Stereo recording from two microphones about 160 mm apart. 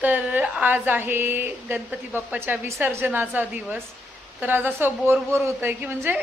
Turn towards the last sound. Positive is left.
turn(degrees=-10)  # may be behind; listen again after turning